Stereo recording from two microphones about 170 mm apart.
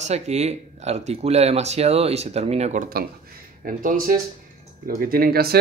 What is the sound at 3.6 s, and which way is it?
Speech, 55° right (ahead or behind).